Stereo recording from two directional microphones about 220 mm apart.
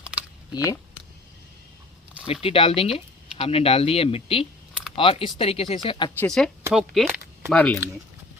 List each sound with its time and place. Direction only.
0.0 s typing: 5° right (ahead or behind)
0.5 s speech: 15° left (ahead or behind)
2.2 s speech: 25° left (ahead or behind)
6.1 s speech: 5° left (ahead or behind)